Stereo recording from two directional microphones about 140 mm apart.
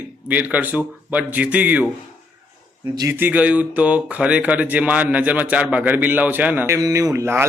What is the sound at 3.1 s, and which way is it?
Speech, 10° right (ahead or behind).